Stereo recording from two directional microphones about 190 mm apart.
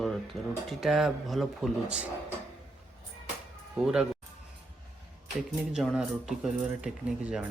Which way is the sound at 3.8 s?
5° right (ahead or behind).